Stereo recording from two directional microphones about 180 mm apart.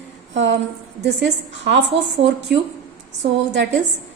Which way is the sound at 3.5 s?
80° right.